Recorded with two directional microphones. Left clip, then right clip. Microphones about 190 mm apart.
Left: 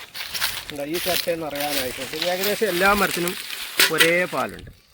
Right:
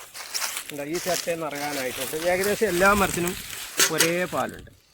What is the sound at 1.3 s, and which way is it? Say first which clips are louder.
Speech: left 3 dB; 35° right (ahead or behind).